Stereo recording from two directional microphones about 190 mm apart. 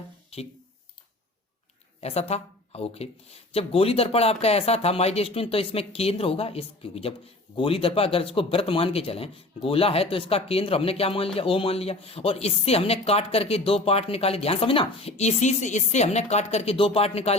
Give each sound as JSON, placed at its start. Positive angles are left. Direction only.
{"t": 2.0, "sound": "speech", "side_deg": 35}